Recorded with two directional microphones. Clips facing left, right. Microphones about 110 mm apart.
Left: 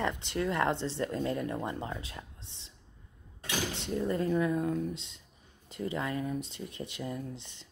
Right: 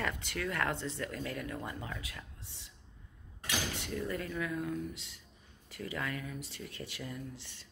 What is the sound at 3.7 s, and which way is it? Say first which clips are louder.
Speech: left 6 dB; 25° left (ahead or behind).